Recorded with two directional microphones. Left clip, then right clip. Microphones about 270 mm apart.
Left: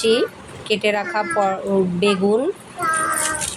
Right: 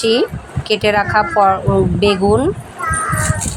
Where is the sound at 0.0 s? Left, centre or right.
Centre.